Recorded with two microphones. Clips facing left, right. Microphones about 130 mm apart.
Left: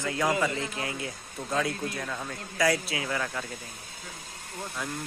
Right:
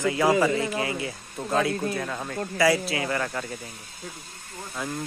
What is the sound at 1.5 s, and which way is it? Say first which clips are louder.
Speech: right 5 dB; 55° right (ahead or behind).